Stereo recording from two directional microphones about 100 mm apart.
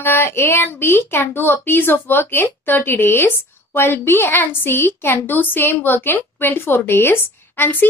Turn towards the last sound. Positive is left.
turn(degrees=20)  # may be behind; listen again after turning